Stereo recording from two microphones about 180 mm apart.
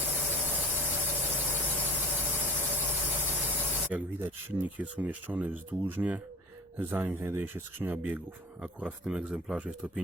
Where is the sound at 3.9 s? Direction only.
10° right (ahead or behind).